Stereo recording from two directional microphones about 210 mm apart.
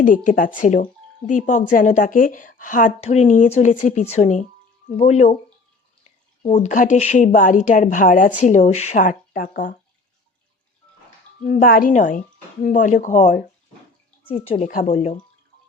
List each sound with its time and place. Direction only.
0.0 s a woman's voice: 40° left (ahead or behind)
6.4 s a woman's voice: 35° left (ahead or behind)
11.4 s a woman's voice: 40° left (ahead or behind)
14.3 s a woman's voice: 25° left (ahead or behind)